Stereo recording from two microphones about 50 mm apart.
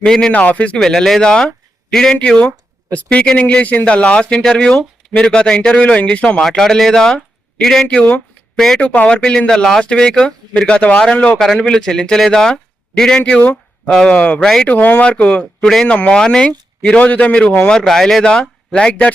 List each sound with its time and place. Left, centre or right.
0.0 s speech: centre
0.3 s speech: left
0.8 s a man's voice: centre
6.6 s speech: centre
9.0 s speech: centre
11.3 s speech: centre
13.3 s speech: left
13.9 s speech: centre; by 15.0 s left
15.0 s speech: left
15.6 s speech: centre
15.9 s speech: left
18.8 s speech: left